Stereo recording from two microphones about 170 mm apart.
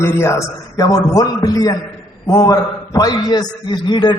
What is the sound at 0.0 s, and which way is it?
A man's voice, 15° left (ahead or behind).